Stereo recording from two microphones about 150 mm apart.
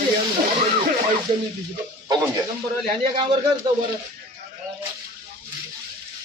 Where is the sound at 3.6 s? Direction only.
30° right (ahead or behind).